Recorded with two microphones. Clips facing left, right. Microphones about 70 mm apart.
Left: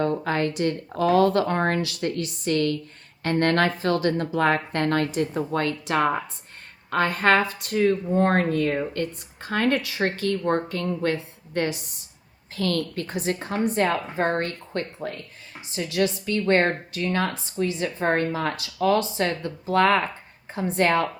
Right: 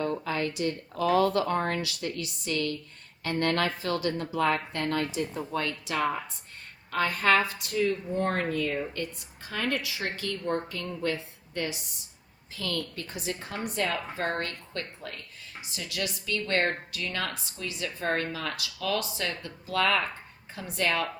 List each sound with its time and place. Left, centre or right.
0.3 s a woman's voice: left